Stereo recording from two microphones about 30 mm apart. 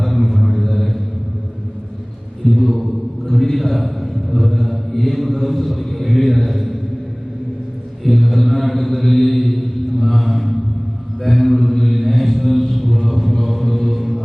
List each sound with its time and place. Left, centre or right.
0.0 s mantra: centre
2.4 s a sound: centre
4.4 s mantra: centre
8.0 s mantra: centre